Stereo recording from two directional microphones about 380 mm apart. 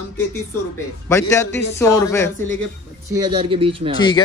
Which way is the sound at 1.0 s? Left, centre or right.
Centre.